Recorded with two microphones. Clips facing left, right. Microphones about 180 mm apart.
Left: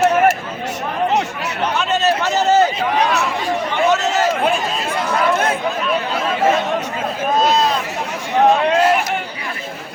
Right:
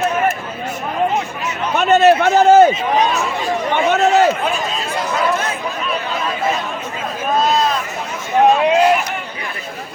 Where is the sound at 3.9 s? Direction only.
60° right (ahead or behind).